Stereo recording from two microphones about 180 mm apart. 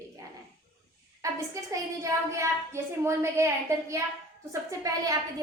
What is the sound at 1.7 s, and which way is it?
A woman's voice, 15° right (ahead or behind).